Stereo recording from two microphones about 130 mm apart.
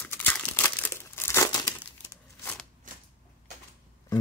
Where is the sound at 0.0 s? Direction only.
15° left (ahead or behind).